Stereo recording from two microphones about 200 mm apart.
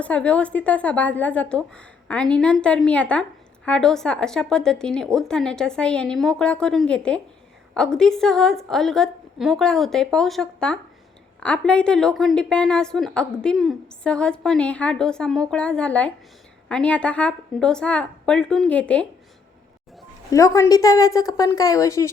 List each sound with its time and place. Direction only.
0.0 s a woman's voice: 5° left (ahead or behind)
20.3 s a woman's voice: 15° left (ahead or behind)